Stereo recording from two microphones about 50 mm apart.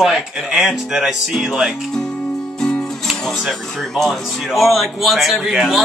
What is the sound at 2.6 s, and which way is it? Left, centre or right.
Speech, centre.